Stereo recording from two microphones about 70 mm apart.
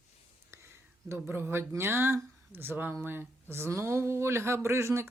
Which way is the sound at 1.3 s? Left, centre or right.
Right.